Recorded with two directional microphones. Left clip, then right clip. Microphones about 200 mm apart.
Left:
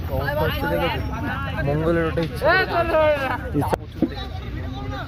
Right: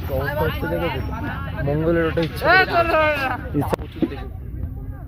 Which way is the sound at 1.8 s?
35° right (ahead or behind).